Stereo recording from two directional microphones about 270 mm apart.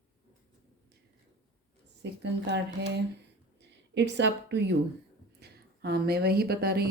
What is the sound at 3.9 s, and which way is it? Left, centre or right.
A woman's voice, right.